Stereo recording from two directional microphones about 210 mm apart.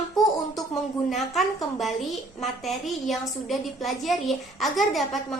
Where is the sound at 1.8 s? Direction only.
Centre (ahead or behind).